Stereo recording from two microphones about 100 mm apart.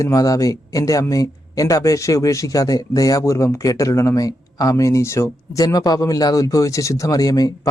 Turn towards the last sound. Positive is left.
turn(degrees=35)  # may be behind; listen again after turning